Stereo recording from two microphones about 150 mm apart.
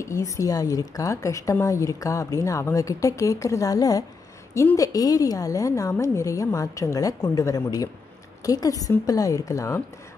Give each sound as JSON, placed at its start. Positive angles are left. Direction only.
{"t": 0.0, "sound": "a woman's voice", "side_deg": 20}